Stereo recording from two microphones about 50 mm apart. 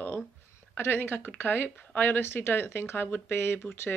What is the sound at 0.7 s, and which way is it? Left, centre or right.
A man's voice, left.